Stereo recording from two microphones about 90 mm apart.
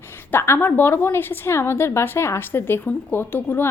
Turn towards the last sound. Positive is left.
turn(degrees=25)  # may be behind; listen again after turning